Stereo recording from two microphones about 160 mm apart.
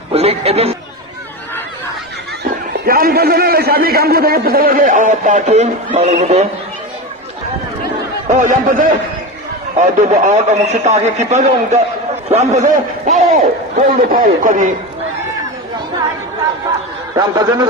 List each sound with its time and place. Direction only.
0.1 s speech: 40° right (ahead or behind)
2.8 s a man's voice: 65° right (ahead or behind); by 6.5 s 45° right (ahead or behind)
8.3 s a man's voice: 50° right (ahead or behind)
13.8 s a man's voice: 60° right (ahead or behind)
17.2 s a man's voice: 25° right (ahead or behind)